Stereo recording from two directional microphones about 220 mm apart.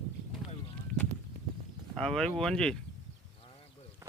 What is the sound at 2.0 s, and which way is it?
Speech, 5° left (ahead or behind).